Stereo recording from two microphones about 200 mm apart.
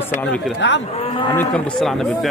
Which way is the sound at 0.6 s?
65° left (ahead or behind).